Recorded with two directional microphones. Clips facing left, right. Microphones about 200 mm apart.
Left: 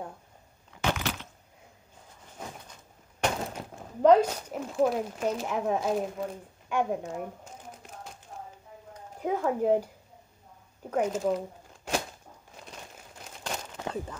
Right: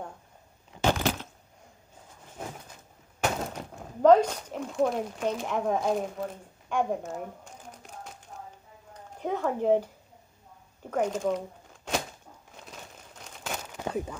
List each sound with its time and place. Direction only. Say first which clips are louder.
0.7 s a sound: right 4 dB; 35° right (ahead or behind)
3.2 s speech: even; 5° left (ahead or behind)
9.2 s speech: left 1 dB; 5° left (ahead or behind)
11.0 s speech: even; 5° left (ahead or behind)
12.5 s crumpling: even; centre (ahead or behind)